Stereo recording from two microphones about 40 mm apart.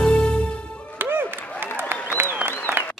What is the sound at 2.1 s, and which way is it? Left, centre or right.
Applause, right.